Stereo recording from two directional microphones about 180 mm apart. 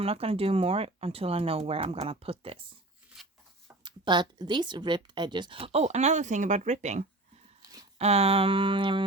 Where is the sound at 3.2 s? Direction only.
Centre (ahead or behind).